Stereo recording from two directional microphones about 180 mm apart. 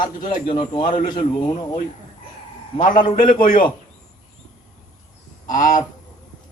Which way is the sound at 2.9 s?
50° left (ahead or behind).